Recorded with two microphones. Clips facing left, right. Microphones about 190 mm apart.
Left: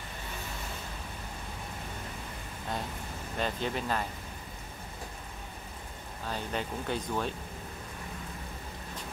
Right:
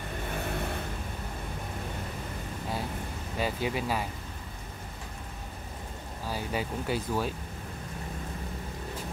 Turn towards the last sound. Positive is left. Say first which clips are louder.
# right 2 dB
turn(degrees=-5)  # may be behind; listen again after turning